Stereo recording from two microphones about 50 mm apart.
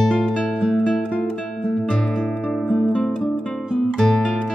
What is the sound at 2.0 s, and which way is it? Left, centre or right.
Music, centre.